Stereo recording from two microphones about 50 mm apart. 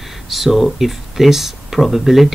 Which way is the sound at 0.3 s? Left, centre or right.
Centre.